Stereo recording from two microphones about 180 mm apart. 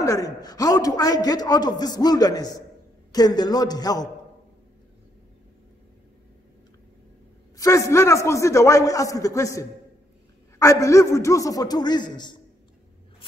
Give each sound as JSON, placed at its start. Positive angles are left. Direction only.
{"t": 0.0, "sound": "a man's voice", "side_deg": 20}
{"t": 7.5, "sound": "a man's voice", "side_deg": 15}